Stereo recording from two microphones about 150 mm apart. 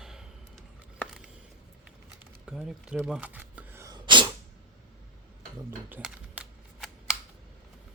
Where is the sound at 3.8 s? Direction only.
30° right (ahead or behind).